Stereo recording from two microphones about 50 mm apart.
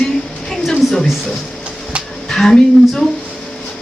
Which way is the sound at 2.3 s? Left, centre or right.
Centre.